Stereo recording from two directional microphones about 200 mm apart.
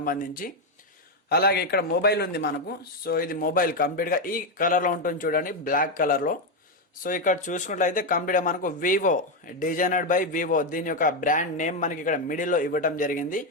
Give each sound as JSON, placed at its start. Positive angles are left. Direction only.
{"t": 0.0, "sound": "a man's voice", "side_deg": 45}